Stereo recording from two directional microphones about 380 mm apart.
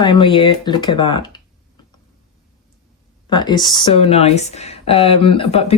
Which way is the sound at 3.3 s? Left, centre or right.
Centre.